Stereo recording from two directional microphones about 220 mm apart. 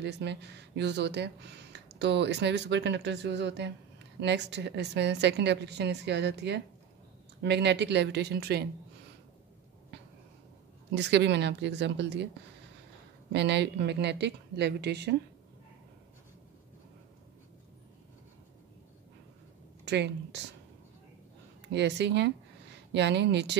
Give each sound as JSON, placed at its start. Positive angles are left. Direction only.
{"t": 0.0, "sound": "speech", "side_deg": -50}
{"t": 11.0, "sound": "speech", "side_deg": -50}
{"t": 13.3, "sound": "speech", "side_deg": -50}
{"t": 19.8, "sound": "speech", "side_deg": -50}
{"t": 21.6, "sound": "speech", "side_deg": -50}